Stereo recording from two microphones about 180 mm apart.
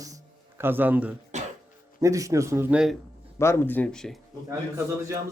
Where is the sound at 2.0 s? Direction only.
15° right (ahead or behind).